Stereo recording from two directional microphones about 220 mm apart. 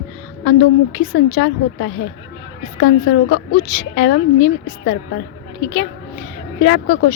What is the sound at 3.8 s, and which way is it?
Speech, 50° left (ahead or behind).